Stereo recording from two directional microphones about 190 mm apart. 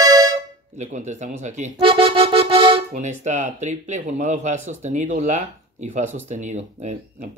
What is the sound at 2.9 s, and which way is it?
Speech, 40° right (ahead or behind).